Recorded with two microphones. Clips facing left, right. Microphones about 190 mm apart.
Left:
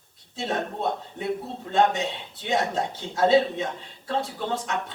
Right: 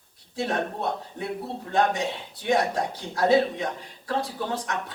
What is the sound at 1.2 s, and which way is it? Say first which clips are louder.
Speech: left 2 dB; 20° left (ahead or behind).